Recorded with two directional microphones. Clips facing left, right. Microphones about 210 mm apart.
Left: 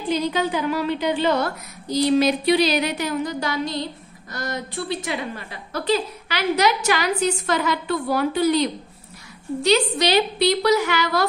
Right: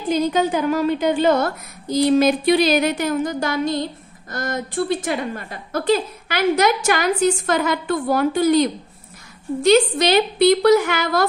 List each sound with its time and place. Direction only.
0.1 s a woman's voice: 45° right (ahead or behind)